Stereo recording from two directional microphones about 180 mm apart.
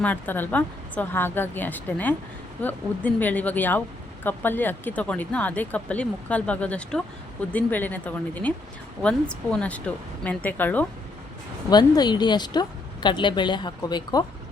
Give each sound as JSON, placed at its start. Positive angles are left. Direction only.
{"t": 0.0, "sound": "speech", "side_deg": 10}
{"t": 11.7, "sound": "a woman's voice", "side_deg": 25}